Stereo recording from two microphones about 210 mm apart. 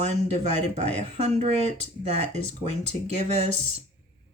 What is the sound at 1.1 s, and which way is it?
Speech, 30° right (ahead or behind).